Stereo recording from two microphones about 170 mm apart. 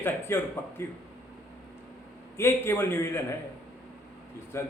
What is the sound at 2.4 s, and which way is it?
Speech, 15° left (ahead or behind).